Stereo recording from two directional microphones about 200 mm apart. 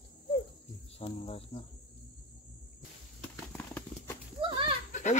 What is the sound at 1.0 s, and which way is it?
Speech, 30° left (ahead or behind).